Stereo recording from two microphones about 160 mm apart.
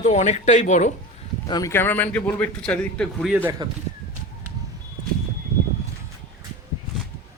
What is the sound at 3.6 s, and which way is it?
Speech, 25° right (ahead or behind).